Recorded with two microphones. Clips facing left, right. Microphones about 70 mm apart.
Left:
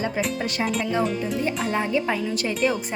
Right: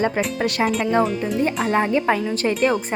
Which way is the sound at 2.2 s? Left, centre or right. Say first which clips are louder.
Right 4 dB; right.